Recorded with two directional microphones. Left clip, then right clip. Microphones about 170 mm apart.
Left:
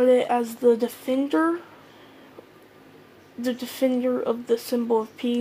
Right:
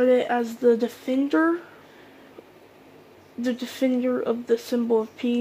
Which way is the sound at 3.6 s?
15° right (ahead or behind).